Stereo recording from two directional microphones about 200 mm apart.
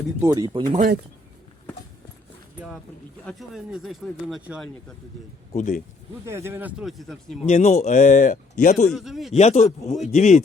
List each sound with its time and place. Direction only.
0.2 s speech: 20° right (ahead or behind)
3.2 s speech: centre (ahead or behind)
5.5 s speech: 35° left (ahead or behind)
6.2 s a man's voice: 15° right (ahead or behind)
7.4 s speech: 30° left (ahead or behind)
8.9 s speech: centre (ahead or behind)
9.3 s speech: 35° left (ahead or behind)